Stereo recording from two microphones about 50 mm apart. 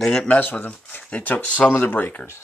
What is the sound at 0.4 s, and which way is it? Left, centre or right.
Speech, left.